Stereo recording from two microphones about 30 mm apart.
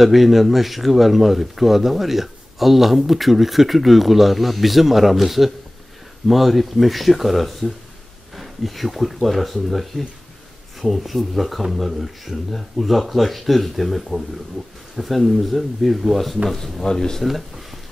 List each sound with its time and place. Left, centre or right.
0.0 s speech: centre
16.8 s speech: centre
17.2 s speech: centre